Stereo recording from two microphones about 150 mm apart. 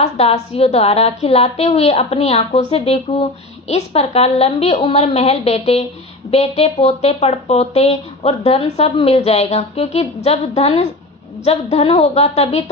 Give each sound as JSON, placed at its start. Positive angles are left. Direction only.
{"t": 0.0, "sound": "speech", "side_deg": 45}